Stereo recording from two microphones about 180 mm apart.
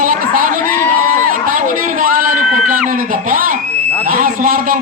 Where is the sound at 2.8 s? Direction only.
50° right (ahead or behind).